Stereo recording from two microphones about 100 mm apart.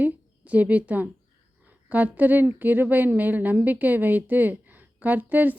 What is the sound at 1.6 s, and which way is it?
Speech, 15° right (ahead or behind).